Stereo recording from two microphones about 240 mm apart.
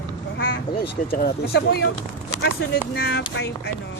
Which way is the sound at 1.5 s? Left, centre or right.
Left.